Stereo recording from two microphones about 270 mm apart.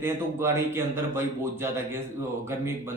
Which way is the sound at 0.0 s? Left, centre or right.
Centre.